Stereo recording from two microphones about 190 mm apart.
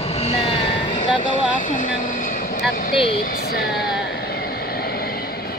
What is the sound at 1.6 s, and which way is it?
Speech, 45° left (ahead or behind).